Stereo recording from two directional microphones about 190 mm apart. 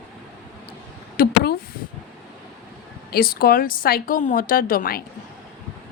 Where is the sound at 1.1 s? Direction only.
55° left (ahead or behind).